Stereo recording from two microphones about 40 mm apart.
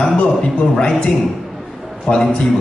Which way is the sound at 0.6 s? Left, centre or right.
Left.